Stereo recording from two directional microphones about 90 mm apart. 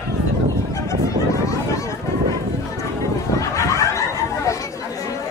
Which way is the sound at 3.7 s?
35° left (ahead or behind).